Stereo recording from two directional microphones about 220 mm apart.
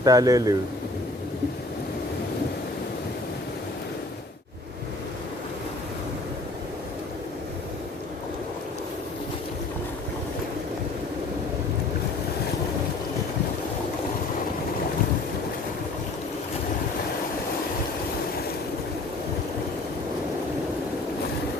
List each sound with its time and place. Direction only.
0.0 s a man's voice: 15° right (ahead or behind)